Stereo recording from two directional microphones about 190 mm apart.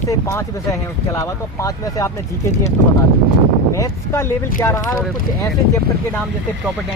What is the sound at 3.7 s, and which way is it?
Speech, 15° left (ahead or behind).